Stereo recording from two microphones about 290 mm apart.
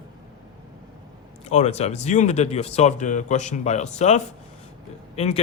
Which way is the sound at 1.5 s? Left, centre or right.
Left.